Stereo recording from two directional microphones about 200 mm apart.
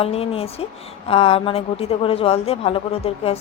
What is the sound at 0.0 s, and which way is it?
A woman's voice, 30° left (ahead or behind).